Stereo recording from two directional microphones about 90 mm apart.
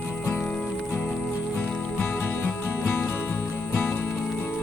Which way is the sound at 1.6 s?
20° left (ahead or behind).